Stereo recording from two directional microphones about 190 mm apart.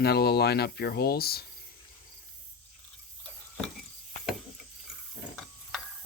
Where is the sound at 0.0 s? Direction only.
55° left (ahead or behind).